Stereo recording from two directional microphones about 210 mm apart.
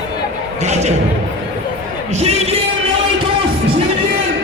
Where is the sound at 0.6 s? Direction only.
30° right (ahead or behind).